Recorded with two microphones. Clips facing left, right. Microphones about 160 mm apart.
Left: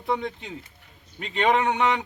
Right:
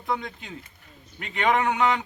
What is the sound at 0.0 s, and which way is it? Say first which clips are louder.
Speech: left 3 dB; 25° left (ahead or behind).